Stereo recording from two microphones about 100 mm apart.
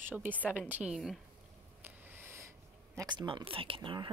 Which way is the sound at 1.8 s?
25° right (ahead or behind).